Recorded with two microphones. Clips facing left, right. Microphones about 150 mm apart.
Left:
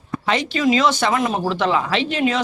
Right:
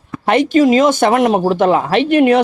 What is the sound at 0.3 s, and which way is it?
Speech, 50° right (ahead or behind).